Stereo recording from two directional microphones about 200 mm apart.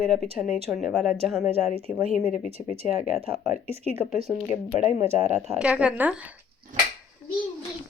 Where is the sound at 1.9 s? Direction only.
40° left (ahead or behind).